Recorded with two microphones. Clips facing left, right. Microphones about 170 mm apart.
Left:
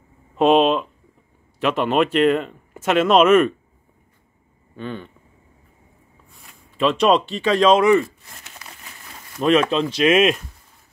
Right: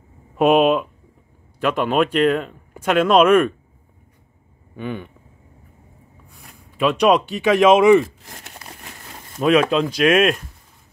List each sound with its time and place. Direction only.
0.4 s speech: centre (ahead or behind)
4.7 s speech: 10° right (ahead or behind)
6.3 s a sound: centre (ahead or behind)
7.5 s speech: 10° right (ahead or behind)
8.5 s a sound: 45° right (ahead or behind)
9.4 s speech: 5° right (ahead or behind)